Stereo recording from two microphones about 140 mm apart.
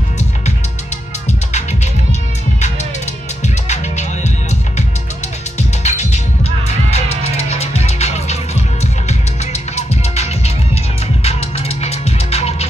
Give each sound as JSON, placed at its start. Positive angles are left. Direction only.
{"t": 3.4, "sound": "music", "side_deg": 55}